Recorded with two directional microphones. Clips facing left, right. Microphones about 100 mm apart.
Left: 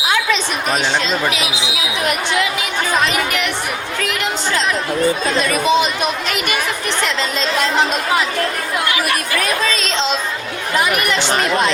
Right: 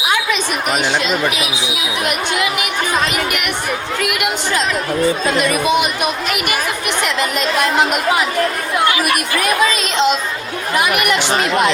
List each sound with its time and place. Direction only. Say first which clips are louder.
4.0 s speech: even; 15° right (ahead or behind)
8.8 s speech: right 4 dB; 25° right (ahead or behind)